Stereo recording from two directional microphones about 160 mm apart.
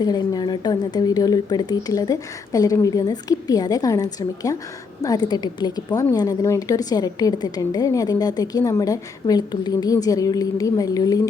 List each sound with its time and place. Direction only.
0.0 s a woman's voice: 25° left (ahead or behind)